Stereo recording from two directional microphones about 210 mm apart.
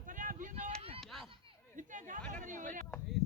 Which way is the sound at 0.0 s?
40° right (ahead or behind).